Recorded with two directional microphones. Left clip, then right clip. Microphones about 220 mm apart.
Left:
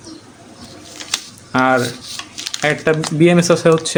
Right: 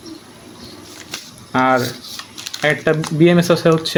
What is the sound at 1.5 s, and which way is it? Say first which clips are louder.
Speech: left 1 dB; 10° left (ahead or behind).